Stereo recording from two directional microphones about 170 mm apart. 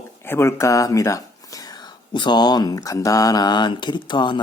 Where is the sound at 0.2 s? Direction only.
15° left (ahead or behind).